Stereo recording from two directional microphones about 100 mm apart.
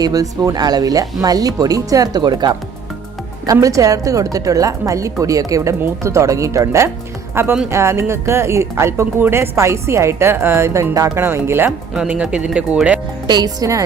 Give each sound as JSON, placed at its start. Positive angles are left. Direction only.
{"t": 0.0, "sound": "a woman's voice", "side_deg": -40}
{"t": 11.9, "sound": "speech", "side_deg": -10}
{"t": 13.2, "sound": "a woman's voice", "side_deg": -45}